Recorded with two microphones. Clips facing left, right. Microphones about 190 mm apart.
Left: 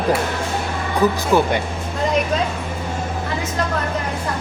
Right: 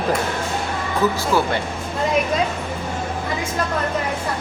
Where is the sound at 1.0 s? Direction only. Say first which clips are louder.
Left 3 dB; 15° left (ahead or behind).